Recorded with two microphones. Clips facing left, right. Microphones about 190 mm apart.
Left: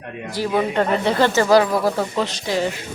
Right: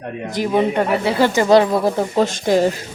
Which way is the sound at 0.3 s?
20° right (ahead or behind).